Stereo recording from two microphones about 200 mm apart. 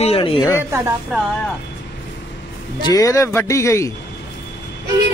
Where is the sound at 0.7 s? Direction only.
10° right (ahead or behind).